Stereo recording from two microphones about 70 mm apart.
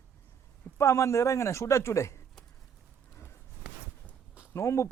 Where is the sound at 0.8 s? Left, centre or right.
Left.